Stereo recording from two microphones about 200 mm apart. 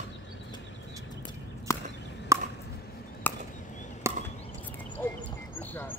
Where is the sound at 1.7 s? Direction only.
15° left (ahead or behind).